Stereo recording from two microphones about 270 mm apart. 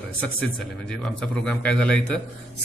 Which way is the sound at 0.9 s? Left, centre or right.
Centre.